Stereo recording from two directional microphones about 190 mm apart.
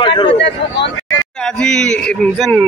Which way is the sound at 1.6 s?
5° left (ahead or behind).